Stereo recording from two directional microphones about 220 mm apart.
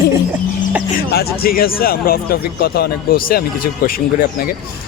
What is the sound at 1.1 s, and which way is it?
Speech, 45° left (ahead or behind).